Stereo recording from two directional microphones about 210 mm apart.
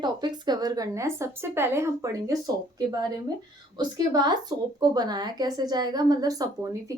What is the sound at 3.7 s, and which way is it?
Speech, 20° right (ahead or behind).